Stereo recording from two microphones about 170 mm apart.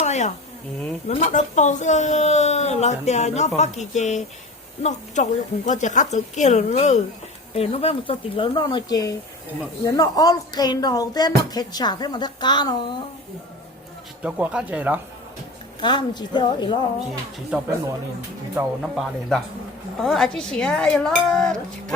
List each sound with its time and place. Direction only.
0.0 s a sound: 45° left (ahead or behind)
1.0 s speech: 50° left (ahead or behind); by 13.0 s 25° left (ahead or behind)
14.2 s speech: 10° right (ahead or behind)
15.8 s speech: 25° left (ahead or behind)
18.8 s dishes: centre (ahead or behind)